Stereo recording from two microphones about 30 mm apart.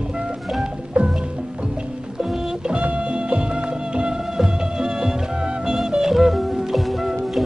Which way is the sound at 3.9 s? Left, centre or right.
Right.